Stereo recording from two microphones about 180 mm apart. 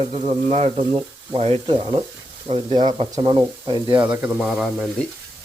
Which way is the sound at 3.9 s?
10° right (ahead or behind).